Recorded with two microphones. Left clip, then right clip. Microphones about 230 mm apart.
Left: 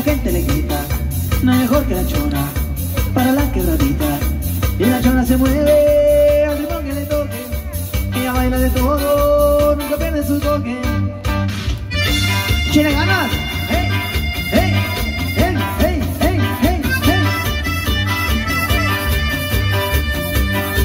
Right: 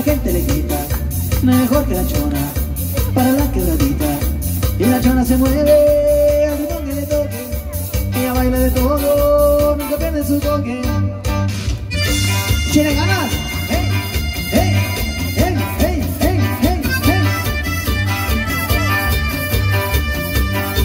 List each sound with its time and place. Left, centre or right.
0.0 s music: left
8.2 s music: left